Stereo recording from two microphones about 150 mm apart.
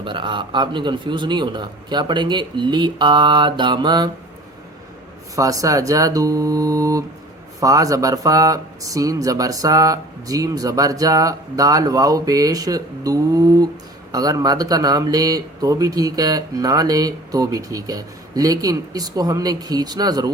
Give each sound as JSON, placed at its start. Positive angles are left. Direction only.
{"t": 0.0, "sound": "a man's voice", "side_deg": -35}
{"t": 5.4, "sound": "speech", "side_deg": -20}